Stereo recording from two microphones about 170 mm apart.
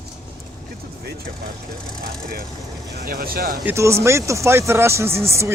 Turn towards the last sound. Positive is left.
turn(degrees=-15)  # may be behind; listen again after turning